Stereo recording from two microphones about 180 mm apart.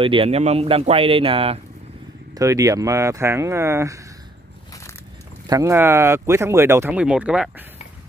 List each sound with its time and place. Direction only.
0.0 s speech: 30° right (ahead or behind)
2.3 s speech: 20° right (ahead or behind)
5.5 s speech: 15° right (ahead or behind)